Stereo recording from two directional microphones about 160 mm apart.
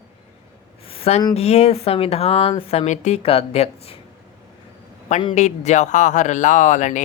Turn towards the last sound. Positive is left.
turn(degrees=50)  # may be behind; listen again after turning